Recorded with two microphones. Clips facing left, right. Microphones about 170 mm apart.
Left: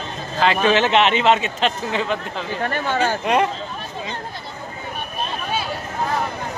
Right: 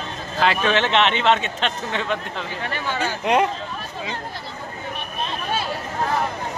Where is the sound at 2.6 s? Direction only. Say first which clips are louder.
Left 6 dB; 45° left (ahead or behind).